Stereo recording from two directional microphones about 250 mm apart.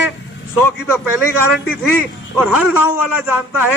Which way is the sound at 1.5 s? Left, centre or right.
Centre.